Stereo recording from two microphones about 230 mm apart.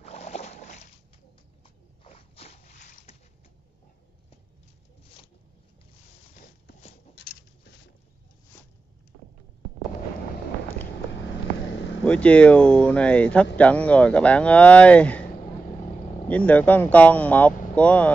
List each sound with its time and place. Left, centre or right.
0.0 s a sound: left
2.0 s boat: left
7.2 s patter: left
11.6 s vehicle: left
12.0 s speech: centre
16.3 s speech: centre